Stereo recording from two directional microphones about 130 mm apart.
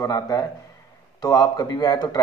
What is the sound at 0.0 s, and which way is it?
A man's voice, 25° left (ahead or behind).